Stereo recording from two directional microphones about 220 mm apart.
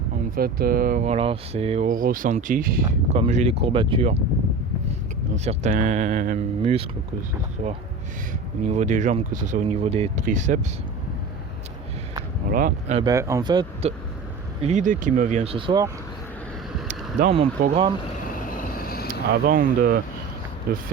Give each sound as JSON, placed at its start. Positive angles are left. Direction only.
{"t": 0.3, "sound": "speech", "side_deg": -40}
{"t": 5.5, "sound": "speech", "side_deg": -35}
{"t": 12.5, "sound": "speech", "side_deg": -40}
{"t": 13.0, "sound": "speech", "side_deg": -15}
{"t": 14.6, "sound": "speech", "side_deg": -35}
{"t": 17.2, "sound": "speech", "side_deg": -30}
{"t": 18.2, "sound": "vehicle", "side_deg": 40}
{"t": 19.3, "sound": "speech", "side_deg": -45}